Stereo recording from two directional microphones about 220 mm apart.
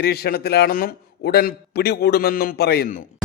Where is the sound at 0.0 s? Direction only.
45° left (ahead or behind).